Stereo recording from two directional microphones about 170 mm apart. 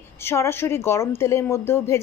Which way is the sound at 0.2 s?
15° left (ahead or behind).